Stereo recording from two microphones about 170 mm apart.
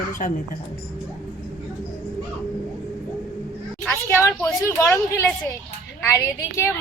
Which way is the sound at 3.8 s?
5° left (ahead or behind).